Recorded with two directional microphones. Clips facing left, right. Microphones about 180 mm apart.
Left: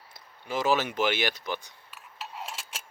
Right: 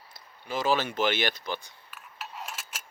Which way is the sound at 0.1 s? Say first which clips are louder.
Left 1 dB; 20° left (ahead or behind).